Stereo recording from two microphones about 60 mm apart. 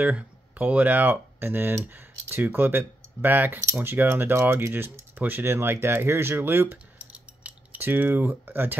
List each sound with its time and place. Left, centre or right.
0.0 s speech: right